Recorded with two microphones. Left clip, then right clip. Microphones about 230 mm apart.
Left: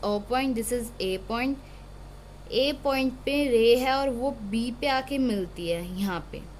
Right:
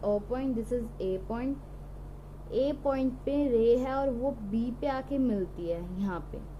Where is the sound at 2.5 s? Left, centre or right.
Left.